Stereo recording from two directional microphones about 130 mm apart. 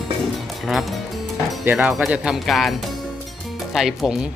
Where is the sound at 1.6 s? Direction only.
15° right (ahead or behind).